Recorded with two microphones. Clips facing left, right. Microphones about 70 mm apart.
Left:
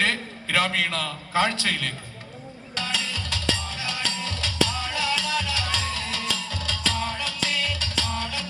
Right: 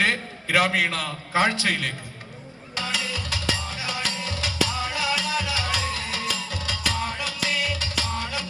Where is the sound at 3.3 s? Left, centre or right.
Centre.